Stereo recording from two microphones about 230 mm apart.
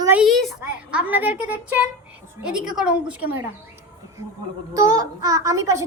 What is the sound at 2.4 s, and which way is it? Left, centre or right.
A woman's voice, centre.